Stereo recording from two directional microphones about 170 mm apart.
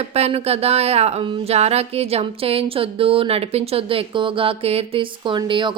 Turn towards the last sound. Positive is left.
turn(degrees=-30)  # may be behind; listen again after turning